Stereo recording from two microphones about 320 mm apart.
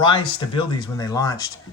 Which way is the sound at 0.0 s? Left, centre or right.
Centre.